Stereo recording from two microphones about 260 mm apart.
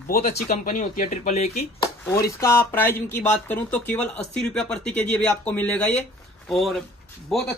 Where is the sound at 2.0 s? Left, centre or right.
Centre.